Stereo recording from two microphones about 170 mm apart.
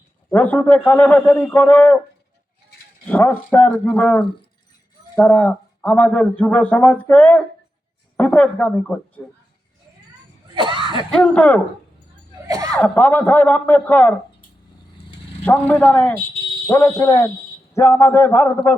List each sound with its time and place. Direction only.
0.3 s speech: 10° left (ahead or behind)
3.1 s speech: 10° left (ahead or behind)
10.5 s cough: 30° right (ahead or behind)
11.1 s speech: 5° left (ahead or behind)
12.5 s chuckle: 20° right (ahead or behind)
12.7 s speech: 10° left (ahead or behind)
15.4 s speech: 10° left (ahead or behind)